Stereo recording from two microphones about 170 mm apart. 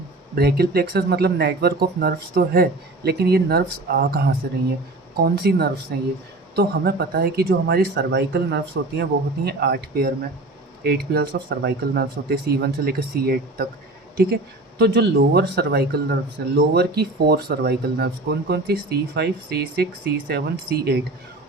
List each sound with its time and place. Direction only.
0.3 s speech: 65° right (ahead or behind)
14.8 s speech: 75° right (ahead or behind)